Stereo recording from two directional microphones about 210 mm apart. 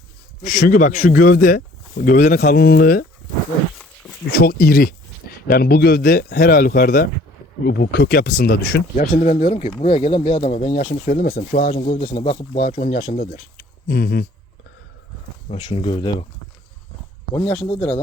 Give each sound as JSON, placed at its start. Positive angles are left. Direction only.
{"t": 0.4, "sound": "speech", "side_deg": 40}
{"t": 3.8, "sound": "a sound", "side_deg": 0}
{"t": 4.4, "sound": "speech", "side_deg": 45}
{"t": 11.0, "sound": "speech", "side_deg": 40}
{"t": 13.8, "sound": "speech", "side_deg": 50}
{"t": 15.4, "sound": "speech", "side_deg": 25}
{"t": 17.4, "sound": "speech", "side_deg": 5}